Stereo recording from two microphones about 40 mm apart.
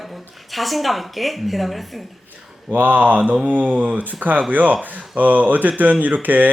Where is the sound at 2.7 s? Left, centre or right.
Right.